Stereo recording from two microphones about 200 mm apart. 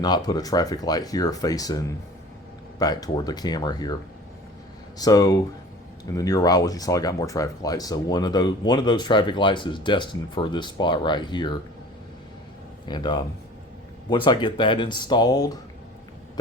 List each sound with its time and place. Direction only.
0.0 s speech: 20° left (ahead or behind)
4.9 s speech: 20° left (ahead or behind)
12.9 s speech: 20° left (ahead or behind)